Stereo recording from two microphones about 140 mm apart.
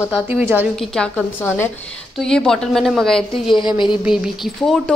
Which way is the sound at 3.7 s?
35° left (ahead or behind).